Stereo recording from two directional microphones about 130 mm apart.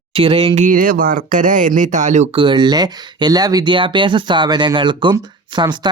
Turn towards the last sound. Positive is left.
turn(degrees=-35)  # may be behind; listen again after turning